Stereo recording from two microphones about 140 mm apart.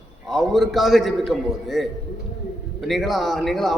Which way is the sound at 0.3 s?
Centre (ahead or behind).